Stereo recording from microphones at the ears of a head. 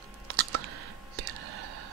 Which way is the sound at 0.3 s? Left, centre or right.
Right.